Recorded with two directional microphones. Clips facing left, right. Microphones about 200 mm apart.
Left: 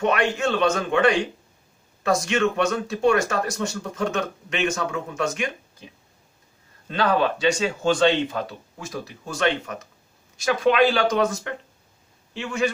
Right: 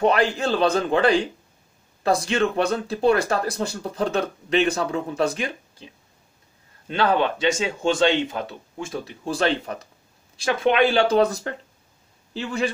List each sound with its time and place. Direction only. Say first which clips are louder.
0.0 s speech: right 2 dB; 35° right (ahead or behind)
7.0 s speech: even; 25° right (ahead or behind)